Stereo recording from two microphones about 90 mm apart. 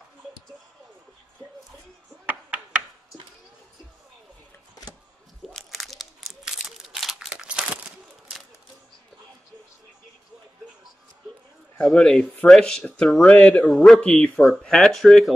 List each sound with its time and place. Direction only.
2.2 s knock: 15° right (ahead or behind)
5.5 s crumpling: 5° left (ahead or behind); by 7.8 s 10° right (ahead or behind)
11.8 s speech: 5° left (ahead or behind)
13.7 s speech: 5° left (ahead or behind)